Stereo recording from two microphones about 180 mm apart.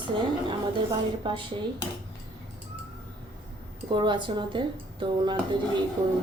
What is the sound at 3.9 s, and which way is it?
A woman's voice, 25° right (ahead or behind).